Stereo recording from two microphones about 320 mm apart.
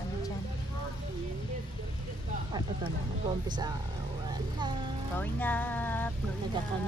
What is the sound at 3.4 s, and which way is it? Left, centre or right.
Speech, centre.